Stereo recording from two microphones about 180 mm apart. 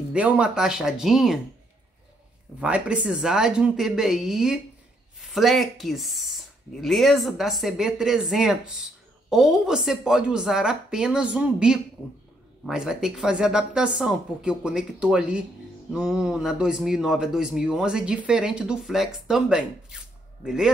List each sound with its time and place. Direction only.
0.1 s speech: 5° right (ahead or behind)
2.6 s speech: 5° right (ahead or behind)